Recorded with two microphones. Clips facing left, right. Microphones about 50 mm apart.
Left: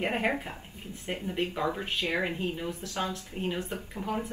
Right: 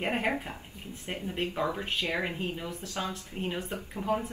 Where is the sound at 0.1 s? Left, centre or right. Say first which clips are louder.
Left 1 dB; left.